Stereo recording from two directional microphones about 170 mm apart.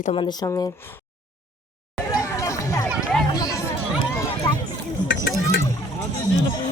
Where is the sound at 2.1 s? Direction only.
20° left (ahead or behind).